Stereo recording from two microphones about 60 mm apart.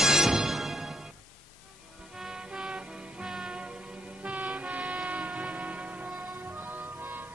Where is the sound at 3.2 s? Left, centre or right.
Centre.